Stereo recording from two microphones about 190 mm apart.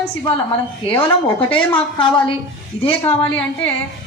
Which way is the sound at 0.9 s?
10° left (ahead or behind).